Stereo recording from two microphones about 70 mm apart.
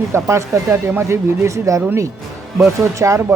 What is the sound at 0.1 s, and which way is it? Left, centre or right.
Speech, right.